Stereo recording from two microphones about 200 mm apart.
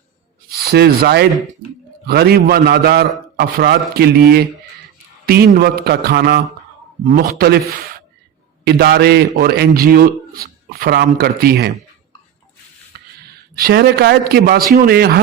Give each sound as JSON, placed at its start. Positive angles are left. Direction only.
{"t": 0.4, "sound": "a man's voice", "side_deg": -50}
{"t": 7.0, "sound": "a man's voice", "side_deg": -45}
{"t": 13.2, "sound": "a man's voice", "side_deg": -50}